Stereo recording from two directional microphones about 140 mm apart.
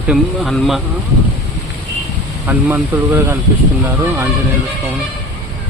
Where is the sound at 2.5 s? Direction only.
15° right (ahead or behind).